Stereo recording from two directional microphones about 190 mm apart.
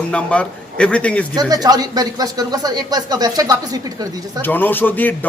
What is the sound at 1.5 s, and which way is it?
Speech, 20° right (ahead or behind).